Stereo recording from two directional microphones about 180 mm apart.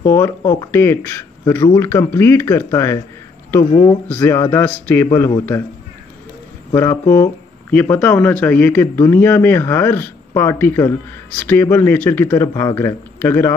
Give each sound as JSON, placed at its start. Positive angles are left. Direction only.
{"t": 0.0, "sound": "speech", "side_deg": 15}
{"t": 3.7, "sound": "speech", "side_deg": 25}
{"t": 4.1, "sound": "speech", "side_deg": 10}
{"t": 6.7, "sound": "speech", "side_deg": 15}